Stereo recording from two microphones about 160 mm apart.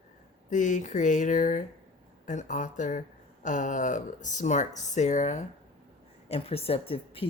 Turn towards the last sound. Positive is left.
turn(degrees=35)  # may be behind; listen again after turning